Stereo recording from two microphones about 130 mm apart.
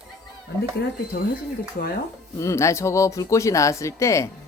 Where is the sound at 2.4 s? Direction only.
20° left (ahead or behind).